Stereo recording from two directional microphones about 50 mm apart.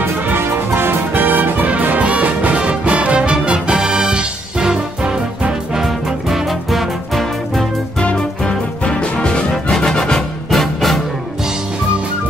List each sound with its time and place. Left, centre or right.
0.0 s music: right; by 7.6 s centre
8.0 s music: left
9.5 s music: centre